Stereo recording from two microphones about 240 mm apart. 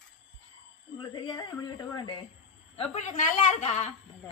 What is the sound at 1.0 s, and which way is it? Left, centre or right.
Speech, centre.